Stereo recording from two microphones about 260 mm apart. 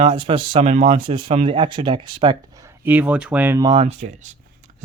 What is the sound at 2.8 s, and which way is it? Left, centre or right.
Speech, centre.